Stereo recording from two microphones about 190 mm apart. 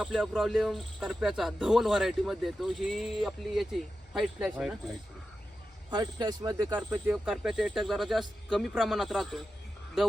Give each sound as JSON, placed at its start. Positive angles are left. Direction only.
{"t": 0.0, "sound": "speech", "side_deg": 0}
{"t": 5.9, "sound": "speech", "side_deg": -20}
{"t": 6.7, "sound": "speech", "side_deg": -10}